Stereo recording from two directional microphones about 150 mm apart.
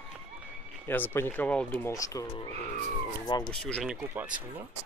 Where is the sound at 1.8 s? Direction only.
20° left (ahead or behind).